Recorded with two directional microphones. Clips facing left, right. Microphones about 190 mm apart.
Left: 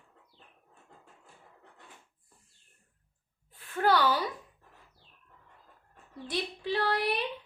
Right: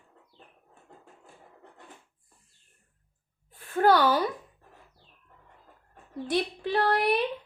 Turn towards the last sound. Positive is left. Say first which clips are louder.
# right 5 dB
turn(degrees=-55)  # may be behind; listen again after turning